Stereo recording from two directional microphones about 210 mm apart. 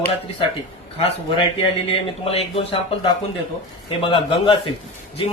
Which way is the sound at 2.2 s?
30° left (ahead or behind).